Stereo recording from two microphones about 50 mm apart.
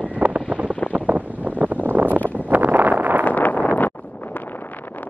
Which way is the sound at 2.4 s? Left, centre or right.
Right.